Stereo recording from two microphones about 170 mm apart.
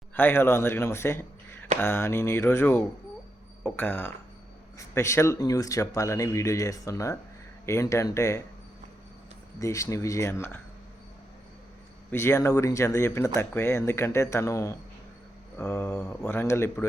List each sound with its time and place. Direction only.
0.1 s a man's voice: 10° left (ahead or behind)
9.6 s speech: 20° left (ahead or behind)
12.1 s speech: 15° left (ahead or behind)